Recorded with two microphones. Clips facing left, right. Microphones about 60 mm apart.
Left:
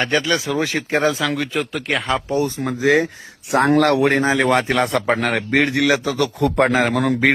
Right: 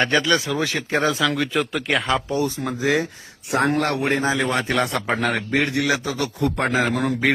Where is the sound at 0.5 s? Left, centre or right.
Left.